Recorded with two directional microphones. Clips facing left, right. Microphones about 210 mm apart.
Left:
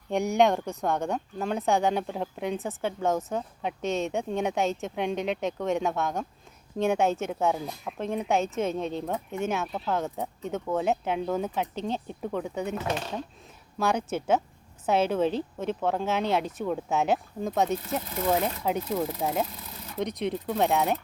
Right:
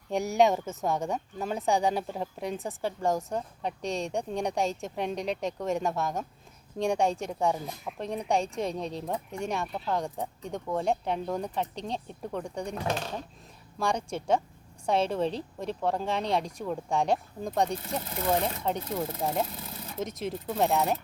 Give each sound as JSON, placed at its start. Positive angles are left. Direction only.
{"t": 0.1, "sound": "speech", "side_deg": 0}
{"t": 13.7, "sound": "speech", "side_deg": 5}